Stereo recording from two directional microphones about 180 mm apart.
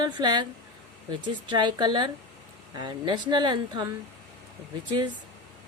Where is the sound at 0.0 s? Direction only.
25° right (ahead or behind).